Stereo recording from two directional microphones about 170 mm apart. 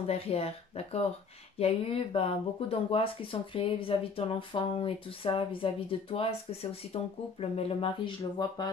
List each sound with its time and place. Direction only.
0.0 s speech: 35° left (ahead or behind)